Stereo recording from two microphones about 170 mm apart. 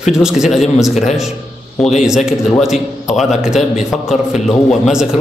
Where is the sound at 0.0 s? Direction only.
5° right (ahead or behind).